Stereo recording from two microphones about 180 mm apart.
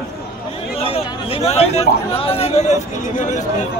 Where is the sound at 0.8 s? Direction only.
35° left (ahead or behind).